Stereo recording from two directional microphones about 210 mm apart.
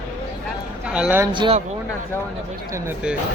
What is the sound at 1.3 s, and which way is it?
Speech, 20° right (ahead or behind).